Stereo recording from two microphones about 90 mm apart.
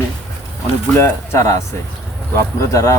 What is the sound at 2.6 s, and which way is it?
Speech, 35° left (ahead or behind).